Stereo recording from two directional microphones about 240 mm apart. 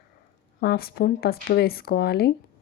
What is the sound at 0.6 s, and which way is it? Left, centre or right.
Speech, left.